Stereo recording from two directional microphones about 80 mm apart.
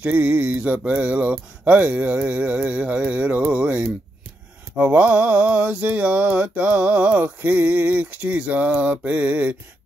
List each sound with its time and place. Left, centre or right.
0.0 s speech: centre
4.7 s mantra: right